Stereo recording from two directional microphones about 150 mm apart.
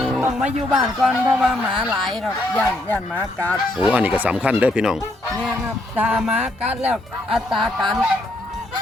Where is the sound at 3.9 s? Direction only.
10° right (ahead or behind).